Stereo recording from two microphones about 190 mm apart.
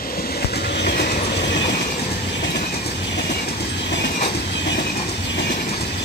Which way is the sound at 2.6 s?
55° left (ahead or behind).